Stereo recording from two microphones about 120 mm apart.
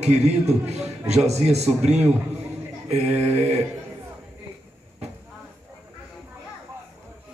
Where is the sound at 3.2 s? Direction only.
65° right (ahead or behind).